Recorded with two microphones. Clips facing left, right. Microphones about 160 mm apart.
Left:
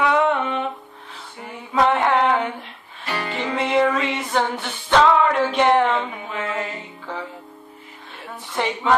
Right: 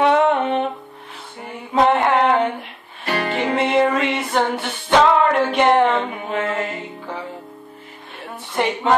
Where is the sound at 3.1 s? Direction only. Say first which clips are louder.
Right 5 dB; 60° right (ahead or behind).